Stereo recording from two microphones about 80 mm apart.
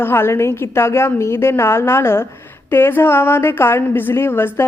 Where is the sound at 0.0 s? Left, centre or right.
Left.